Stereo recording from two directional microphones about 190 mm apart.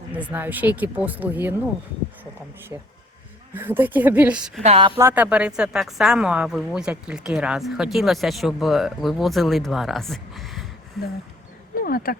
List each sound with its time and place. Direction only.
0.1 s speech: 10° right (ahead or behind)
3.5 s speech: 10° right (ahead or behind)
4.6 s a woman's voice: 30° right (ahead or behind)
4.9 s speech: 10° right (ahead or behind)
11.8 s speech: 50° left (ahead or behind)